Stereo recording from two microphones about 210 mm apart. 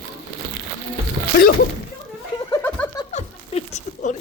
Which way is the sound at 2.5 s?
10° left (ahead or behind).